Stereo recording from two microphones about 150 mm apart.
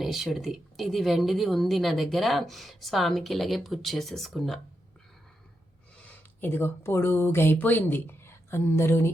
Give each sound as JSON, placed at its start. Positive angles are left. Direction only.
{"t": 0.0, "sound": "a woman's voice", "side_deg": 0}
{"t": 6.4, "sound": "speech", "side_deg": 15}